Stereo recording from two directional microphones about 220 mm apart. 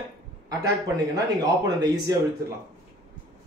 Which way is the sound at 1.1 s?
15° right (ahead or behind).